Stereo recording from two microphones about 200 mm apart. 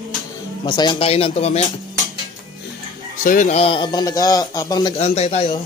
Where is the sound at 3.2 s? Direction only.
40° left (ahead or behind); by 5.0 s 20° left (ahead or behind).